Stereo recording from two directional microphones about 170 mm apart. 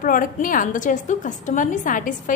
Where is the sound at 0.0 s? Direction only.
55° left (ahead or behind).